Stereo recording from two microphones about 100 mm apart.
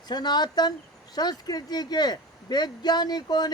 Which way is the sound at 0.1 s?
45° left (ahead or behind).